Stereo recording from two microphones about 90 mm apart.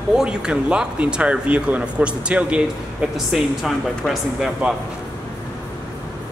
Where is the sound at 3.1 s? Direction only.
Centre (ahead or behind).